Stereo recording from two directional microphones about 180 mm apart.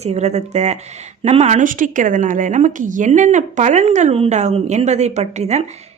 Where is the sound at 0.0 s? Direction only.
35° right (ahead or behind).